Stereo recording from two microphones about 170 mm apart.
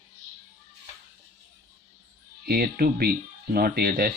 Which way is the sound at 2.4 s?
65° right (ahead or behind).